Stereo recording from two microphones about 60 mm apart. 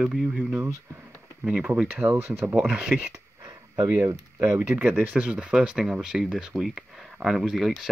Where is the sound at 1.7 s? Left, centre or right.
Right.